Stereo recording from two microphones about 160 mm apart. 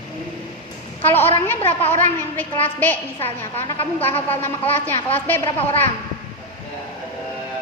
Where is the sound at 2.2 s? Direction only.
10° left (ahead or behind).